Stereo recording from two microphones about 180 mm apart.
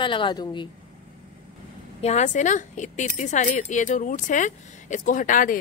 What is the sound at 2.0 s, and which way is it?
A woman's voice, 40° left (ahead or behind).